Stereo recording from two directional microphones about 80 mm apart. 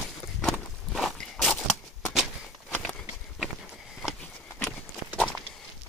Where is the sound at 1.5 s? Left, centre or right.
Centre.